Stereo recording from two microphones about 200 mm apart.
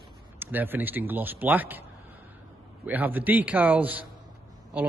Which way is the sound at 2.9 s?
10° right (ahead or behind).